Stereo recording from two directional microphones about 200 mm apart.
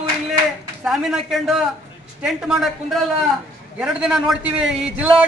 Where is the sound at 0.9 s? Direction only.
Centre (ahead or behind).